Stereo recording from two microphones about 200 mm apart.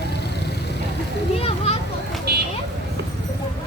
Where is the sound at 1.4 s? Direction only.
30° left (ahead or behind).